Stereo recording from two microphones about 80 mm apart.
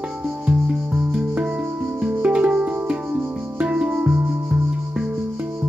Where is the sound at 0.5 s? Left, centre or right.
Centre.